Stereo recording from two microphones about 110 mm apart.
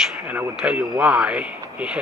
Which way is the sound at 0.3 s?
10° right (ahead or behind).